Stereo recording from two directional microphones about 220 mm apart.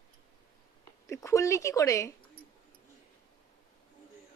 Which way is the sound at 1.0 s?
15° left (ahead or behind).